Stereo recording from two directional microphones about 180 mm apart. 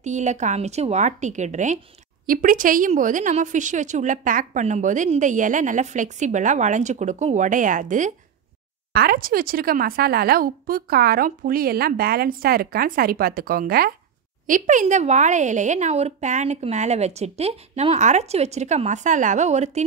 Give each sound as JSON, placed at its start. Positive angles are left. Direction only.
{"t": 0.0, "sound": "a woman's voice", "side_deg": -40}
{"t": 8.9, "sound": "a woman's voice", "side_deg": -55}